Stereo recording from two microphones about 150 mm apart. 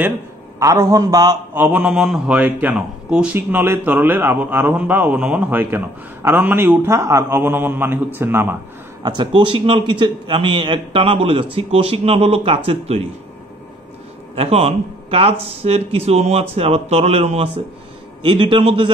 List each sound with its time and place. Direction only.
0.6 s a man's voice: 20° right (ahead or behind)
1.5 s a man's voice: 10° right (ahead or behind)
9.0 s a man's voice: 30° right (ahead or behind)
14.3 s speech: 40° right (ahead or behind)
18.2 s a man's voice: 30° right (ahead or behind)